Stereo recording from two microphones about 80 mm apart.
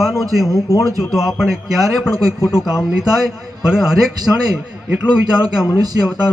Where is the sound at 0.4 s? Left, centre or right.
Left.